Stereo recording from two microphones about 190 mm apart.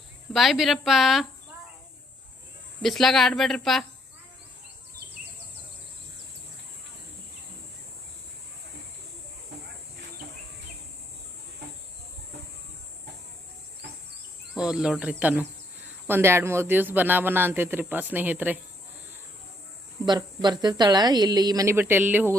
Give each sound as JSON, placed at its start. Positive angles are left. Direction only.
{"t": 0.3, "sound": "speech", "side_deg": 0}
{"t": 2.8, "sound": "speech", "side_deg": 0}
{"t": 14.5, "sound": "a man's voice", "side_deg": -5}
{"t": 20.1, "sound": "speech", "side_deg": -20}